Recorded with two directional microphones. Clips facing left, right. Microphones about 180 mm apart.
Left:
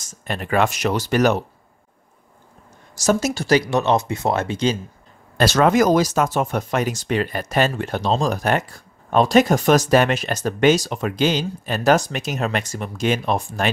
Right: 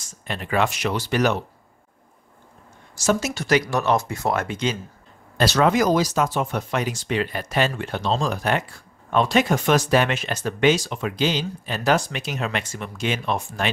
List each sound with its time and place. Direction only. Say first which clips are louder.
0.0 s speech: left 3 dB; 45° left (ahead or behind)
3.0 s speech: left 3 dB; 40° left (ahead or behind)
5.4 s speech: left 3 dB; 50° left (ahead or behind)